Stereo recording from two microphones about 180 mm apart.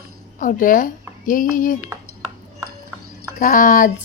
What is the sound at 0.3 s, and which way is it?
Speech, 50° left (ahead or behind).